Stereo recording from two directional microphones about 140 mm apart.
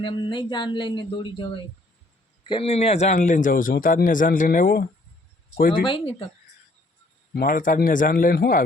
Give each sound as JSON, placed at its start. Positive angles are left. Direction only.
{"t": 0.0, "sound": "speech", "side_deg": 35}
{"t": 2.5, "sound": "speech", "side_deg": 45}
{"t": 5.8, "sound": "speech", "side_deg": 35}
{"t": 7.4, "sound": "speech", "side_deg": 75}